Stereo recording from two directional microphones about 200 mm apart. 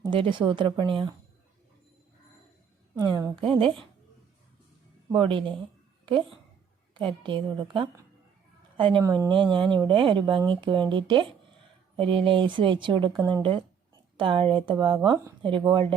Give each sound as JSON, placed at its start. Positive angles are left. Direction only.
{"t": 0.0, "sound": "speech", "side_deg": -25}
{"t": 3.0, "sound": "speech", "side_deg": -15}
{"t": 5.1, "sound": "speech", "side_deg": -25}
{"t": 6.9, "sound": "speech", "side_deg": -25}